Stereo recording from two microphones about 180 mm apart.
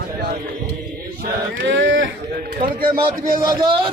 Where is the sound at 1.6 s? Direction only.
85° right.